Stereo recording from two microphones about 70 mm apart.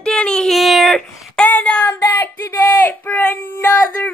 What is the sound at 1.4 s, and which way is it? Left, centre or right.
Child singing, centre.